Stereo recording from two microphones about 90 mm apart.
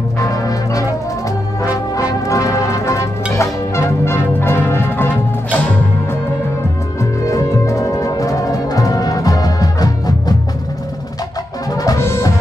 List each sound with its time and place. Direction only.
0.2 s brass instrument: 40° left (ahead or behind)
1.6 s music: 40° left (ahead or behind); by 5.1 s 25° left (ahead or behind)
7.0 s music: 35° left (ahead or behind)
11.7 s music: 45° left (ahead or behind)
12.0 s music: 30° left (ahead or behind)